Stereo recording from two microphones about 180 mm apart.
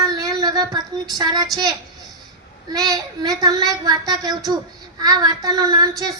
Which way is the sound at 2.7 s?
20° right (ahead or behind).